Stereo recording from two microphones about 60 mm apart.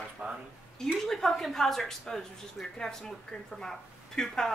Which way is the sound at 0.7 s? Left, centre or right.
Centre.